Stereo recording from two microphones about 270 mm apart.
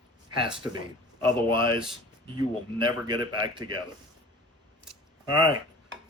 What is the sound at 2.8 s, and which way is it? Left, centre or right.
Speech, centre.